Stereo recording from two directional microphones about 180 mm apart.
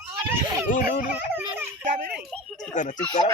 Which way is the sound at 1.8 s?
55° right (ahead or behind).